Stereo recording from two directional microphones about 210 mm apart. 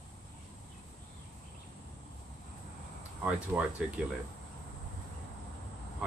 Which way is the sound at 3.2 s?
5° right (ahead or behind).